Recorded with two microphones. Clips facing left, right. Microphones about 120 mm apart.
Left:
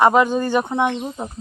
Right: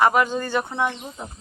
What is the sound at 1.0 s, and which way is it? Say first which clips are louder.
Speech: left 8 dB; 35° left (ahead or behind).